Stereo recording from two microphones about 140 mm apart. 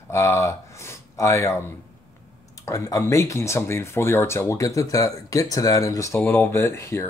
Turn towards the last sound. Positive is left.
turn(degrees=20)  # may be behind; listen again after turning